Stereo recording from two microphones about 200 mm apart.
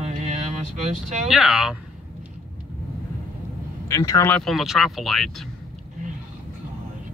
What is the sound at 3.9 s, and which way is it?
Speech, 15° left (ahead or behind).